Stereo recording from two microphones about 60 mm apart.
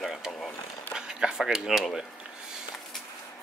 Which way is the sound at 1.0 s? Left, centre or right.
Centre.